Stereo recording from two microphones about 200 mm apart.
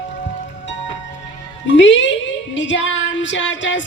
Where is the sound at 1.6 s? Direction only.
65° left (ahead or behind).